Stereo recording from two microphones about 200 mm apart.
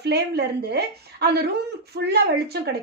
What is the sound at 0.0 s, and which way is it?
A woman's voice, 55° right (ahead or behind).